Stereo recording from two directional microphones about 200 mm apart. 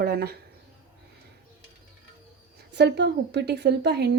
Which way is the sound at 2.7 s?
60° right (ahead or behind).